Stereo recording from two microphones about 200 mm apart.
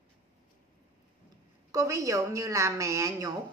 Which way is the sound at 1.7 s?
15° right (ahead or behind).